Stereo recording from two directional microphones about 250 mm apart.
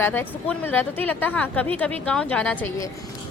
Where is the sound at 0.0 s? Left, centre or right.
Centre.